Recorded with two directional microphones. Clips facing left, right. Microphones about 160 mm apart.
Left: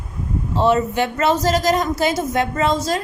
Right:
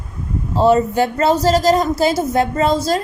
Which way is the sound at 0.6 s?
35° right (ahead or behind).